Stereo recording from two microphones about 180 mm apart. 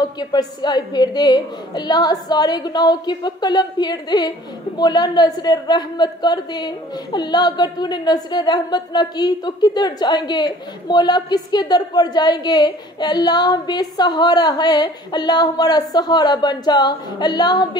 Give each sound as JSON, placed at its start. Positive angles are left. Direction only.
{"t": 0.0, "sound": "a woman's voice", "side_deg": 20}